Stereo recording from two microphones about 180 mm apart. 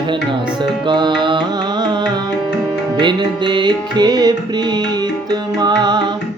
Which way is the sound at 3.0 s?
25° right (ahead or behind).